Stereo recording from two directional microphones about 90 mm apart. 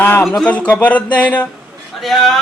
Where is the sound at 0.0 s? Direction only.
25° left (ahead or behind).